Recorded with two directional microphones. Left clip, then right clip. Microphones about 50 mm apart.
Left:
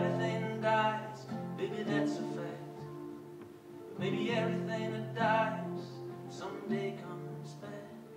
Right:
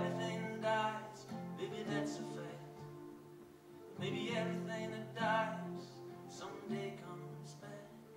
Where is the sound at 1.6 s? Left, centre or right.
Left.